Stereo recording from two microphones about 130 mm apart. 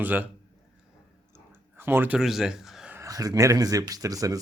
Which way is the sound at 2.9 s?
25° right (ahead or behind).